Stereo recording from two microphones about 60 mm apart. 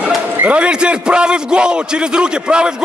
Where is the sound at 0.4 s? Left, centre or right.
Right.